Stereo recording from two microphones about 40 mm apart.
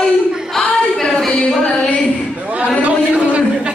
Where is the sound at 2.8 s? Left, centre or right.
Right.